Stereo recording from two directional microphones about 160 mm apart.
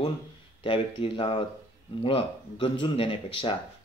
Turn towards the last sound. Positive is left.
turn(degrees=35)  # may be behind; listen again after turning